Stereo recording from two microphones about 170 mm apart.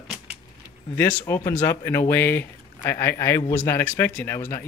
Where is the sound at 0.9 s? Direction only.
15° left (ahead or behind).